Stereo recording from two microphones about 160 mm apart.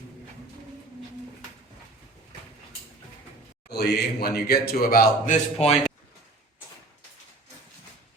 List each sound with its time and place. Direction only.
3.7 s speech: 90° left; by 5.8 s 40° left (ahead or behind)